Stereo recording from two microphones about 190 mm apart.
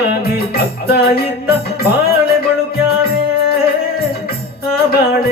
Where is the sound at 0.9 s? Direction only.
55° left (ahead or behind).